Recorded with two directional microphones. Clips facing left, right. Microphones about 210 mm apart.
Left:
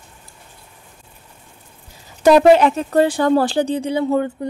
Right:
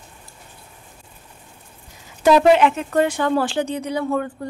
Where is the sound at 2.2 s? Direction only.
40° left (ahead or behind).